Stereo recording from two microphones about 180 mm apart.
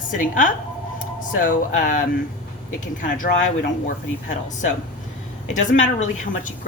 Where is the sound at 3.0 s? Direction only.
55° left (ahead or behind).